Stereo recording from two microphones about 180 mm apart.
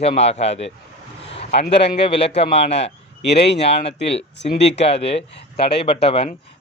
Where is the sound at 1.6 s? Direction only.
65° left (ahead or behind).